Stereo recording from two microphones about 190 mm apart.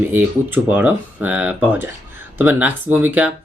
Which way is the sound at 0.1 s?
10° right (ahead or behind).